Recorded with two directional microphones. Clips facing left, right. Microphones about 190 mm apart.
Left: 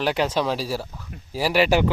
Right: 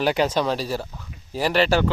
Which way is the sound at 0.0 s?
Centre (ahead or behind).